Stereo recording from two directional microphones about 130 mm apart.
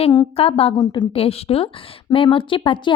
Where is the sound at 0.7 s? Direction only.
35° left (ahead or behind).